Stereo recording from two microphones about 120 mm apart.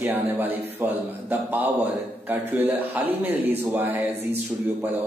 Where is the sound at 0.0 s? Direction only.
15° right (ahead or behind).